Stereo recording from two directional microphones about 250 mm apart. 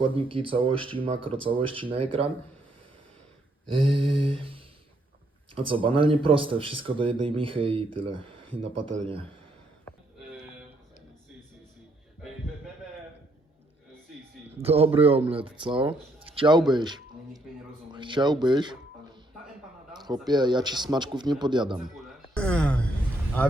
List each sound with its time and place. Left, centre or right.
0.0 s speech: right
3.7 s speech: right
14.6 s a man's voice: right
17.9 s music: centre
19.9 s a sound: centre
20.2 s speech: centre
21.9 s a sound: centre